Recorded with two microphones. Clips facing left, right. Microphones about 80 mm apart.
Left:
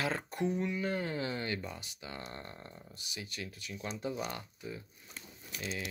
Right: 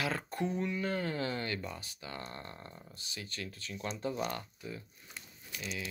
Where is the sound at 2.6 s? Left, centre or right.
Centre.